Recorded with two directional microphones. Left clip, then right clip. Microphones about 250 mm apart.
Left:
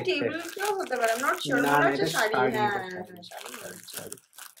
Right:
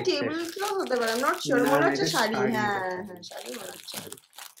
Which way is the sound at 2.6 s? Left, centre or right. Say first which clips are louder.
Even; centre.